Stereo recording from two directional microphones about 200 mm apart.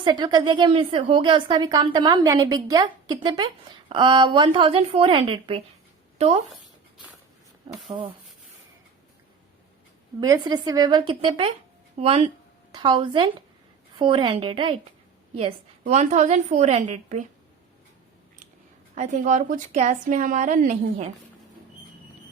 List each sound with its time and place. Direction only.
0.0 s a woman's voice: 20° right (ahead or behind)
7.9 s a woman's voice: 25° right (ahead or behind)
10.2 s a woman's voice: 20° right (ahead or behind)
18.9 s a woman's voice: 40° right (ahead or behind)